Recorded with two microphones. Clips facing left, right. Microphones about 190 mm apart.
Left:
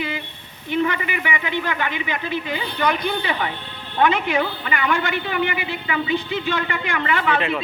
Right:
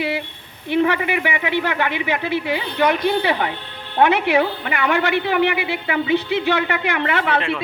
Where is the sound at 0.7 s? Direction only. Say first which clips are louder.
Right 4 dB; 65° right (ahead or behind).